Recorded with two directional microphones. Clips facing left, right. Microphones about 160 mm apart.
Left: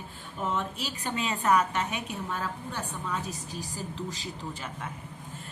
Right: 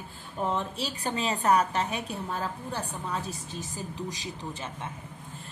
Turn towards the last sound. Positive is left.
turn(degrees=-20)  # may be behind; listen again after turning